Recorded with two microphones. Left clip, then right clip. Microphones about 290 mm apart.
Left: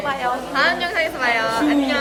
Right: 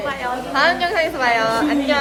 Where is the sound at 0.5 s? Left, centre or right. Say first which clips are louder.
Right 3 dB; centre.